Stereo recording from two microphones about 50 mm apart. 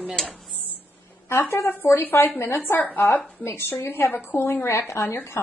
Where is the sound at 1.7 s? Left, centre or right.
Left.